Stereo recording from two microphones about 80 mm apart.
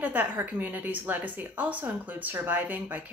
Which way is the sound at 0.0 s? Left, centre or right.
Right.